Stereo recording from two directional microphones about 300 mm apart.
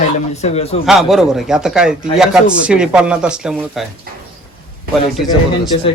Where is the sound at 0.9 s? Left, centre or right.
Centre.